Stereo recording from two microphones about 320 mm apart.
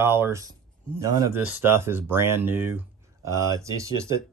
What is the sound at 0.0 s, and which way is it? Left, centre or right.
Speech, centre.